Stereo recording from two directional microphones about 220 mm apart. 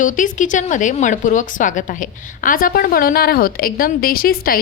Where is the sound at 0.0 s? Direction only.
35° left (ahead or behind).